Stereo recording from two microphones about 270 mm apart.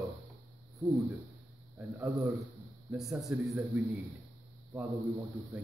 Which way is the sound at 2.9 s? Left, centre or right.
Centre.